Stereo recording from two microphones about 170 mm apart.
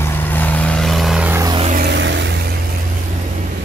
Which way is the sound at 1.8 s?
85° right.